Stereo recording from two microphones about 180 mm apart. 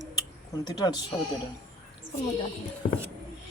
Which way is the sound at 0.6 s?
20° left (ahead or behind).